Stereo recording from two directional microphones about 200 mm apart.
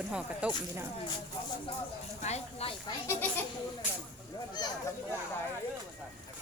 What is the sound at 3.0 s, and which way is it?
Speech, 15° left (ahead or behind).